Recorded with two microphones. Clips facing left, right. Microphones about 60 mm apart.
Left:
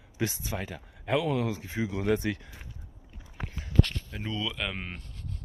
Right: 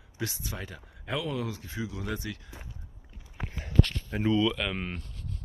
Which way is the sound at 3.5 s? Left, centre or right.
Right.